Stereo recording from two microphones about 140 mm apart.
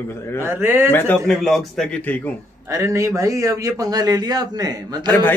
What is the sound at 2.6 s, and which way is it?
A man's voice, 20° right (ahead or behind).